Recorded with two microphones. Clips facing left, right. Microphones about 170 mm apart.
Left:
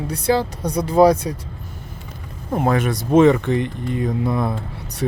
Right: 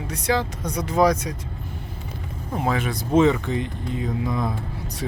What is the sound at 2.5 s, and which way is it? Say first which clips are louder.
Speech: left 5 dB; 50° left (ahead or behind).